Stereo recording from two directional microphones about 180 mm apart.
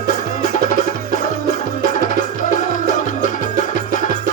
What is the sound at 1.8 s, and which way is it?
Music, 45° left (ahead or behind).